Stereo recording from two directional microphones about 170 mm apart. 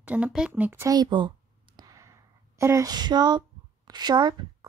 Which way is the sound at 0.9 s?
25° right (ahead or behind).